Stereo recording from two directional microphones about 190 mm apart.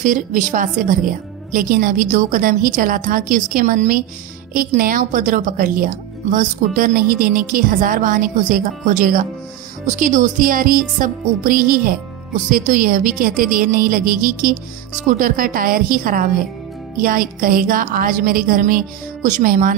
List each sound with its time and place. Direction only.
0.0 s a woman's voice: 45° right (ahead or behind)